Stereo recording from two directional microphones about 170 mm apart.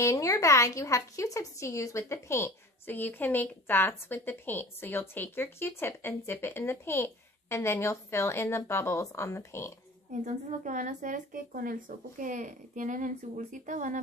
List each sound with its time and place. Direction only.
0.0 s a woman's voice: 20° left (ahead or behind)
10.1 s a woman's voice: 50° right (ahead or behind)